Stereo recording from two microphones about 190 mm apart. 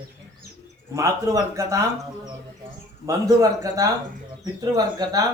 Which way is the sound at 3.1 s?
20° right (ahead or behind).